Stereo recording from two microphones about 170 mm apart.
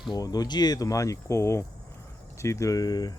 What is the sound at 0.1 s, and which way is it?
Speech, 20° left (ahead or behind).